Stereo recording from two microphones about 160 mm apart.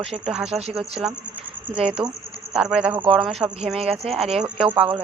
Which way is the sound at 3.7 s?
35° right (ahead or behind).